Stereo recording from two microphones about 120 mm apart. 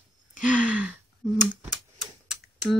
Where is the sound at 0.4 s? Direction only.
10° right (ahead or behind).